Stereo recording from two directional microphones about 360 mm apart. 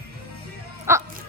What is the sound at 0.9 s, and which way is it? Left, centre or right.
Music, centre.